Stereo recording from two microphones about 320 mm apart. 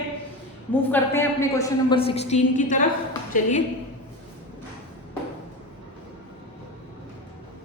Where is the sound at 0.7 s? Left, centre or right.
Centre; by 3.5 s left.